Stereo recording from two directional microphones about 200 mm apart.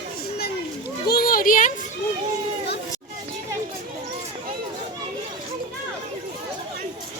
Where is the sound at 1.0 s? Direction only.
50° left (ahead or behind).